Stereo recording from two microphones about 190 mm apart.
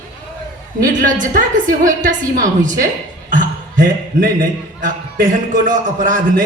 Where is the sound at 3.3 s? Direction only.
45° right (ahead or behind).